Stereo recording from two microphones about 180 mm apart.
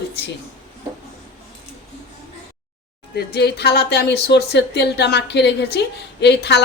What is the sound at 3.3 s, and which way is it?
Speech, 65° left (ahead or behind).